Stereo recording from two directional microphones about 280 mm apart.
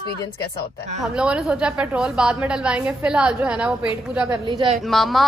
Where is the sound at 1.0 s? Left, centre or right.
Centre.